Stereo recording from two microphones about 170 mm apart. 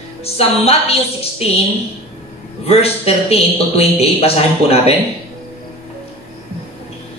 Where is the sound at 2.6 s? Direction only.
35° left (ahead or behind).